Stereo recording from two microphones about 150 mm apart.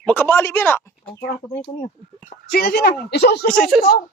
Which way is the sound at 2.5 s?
90° left.